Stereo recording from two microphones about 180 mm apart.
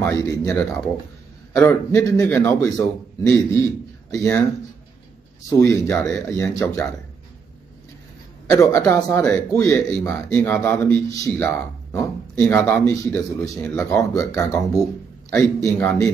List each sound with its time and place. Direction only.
0.0 s speech: 15° left (ahead or behind)
5.5 s speech: 15° left (ahead or behind)
5.9 s speech: 5° left (ahead or behind)
8.5 s speech: 15° left (ahead or behind)